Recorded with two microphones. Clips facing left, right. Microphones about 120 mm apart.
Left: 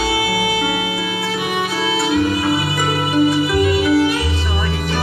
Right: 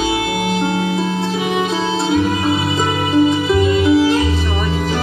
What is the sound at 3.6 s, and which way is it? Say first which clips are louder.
Music: right 2 dB; 25° right (ahead or behind).